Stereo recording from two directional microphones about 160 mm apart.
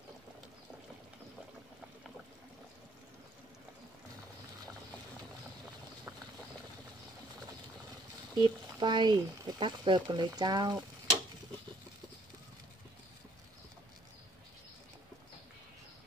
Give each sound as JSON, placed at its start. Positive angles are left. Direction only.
{"t": 8.4, "sound": "speech", "side_deg": -30}